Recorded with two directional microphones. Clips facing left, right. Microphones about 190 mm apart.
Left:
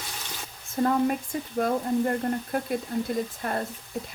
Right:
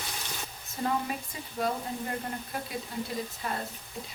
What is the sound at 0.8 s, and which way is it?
Speech, 50° left (ahead or behind).